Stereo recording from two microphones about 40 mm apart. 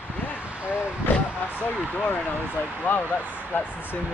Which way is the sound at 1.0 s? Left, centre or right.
Left.